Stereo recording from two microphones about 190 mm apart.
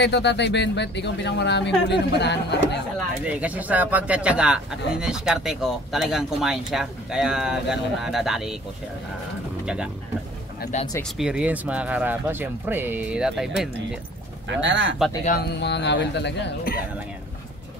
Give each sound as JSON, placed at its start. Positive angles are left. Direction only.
{"t": 0.0, "sound": "speech", "side_deg": 65}
{"t": 3.3, "sound": "speech", "side_deg": -5}
{"t": 11.0, "sound": "speech", "side_deg": -5}
{"t": 14.6, "sound": "speech", "side_deg": -75}
{"t": 15.2, "sound": "speech", "side_deg": 55}